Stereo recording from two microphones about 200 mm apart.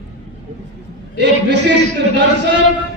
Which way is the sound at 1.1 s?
60° right (ahead or behind).